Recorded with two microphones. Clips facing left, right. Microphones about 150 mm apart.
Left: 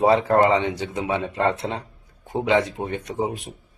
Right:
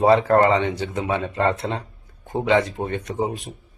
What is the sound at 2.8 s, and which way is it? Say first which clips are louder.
Speech: right 2 dB; 10° left (ahead or behind).